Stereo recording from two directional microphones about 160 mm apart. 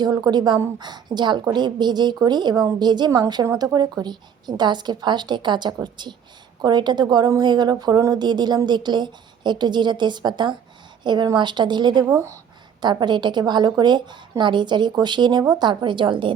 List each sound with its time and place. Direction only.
0.0 s a woman's voice: 25° right (ahead or behind)
12.0 s speech: 20° right (ahead or behind)
12.8 s a woman's voice: 30° right (ahead or behind)